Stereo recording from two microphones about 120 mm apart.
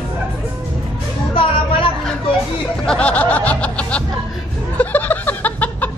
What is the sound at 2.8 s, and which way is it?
Snicker, 10° left (ahead or behind).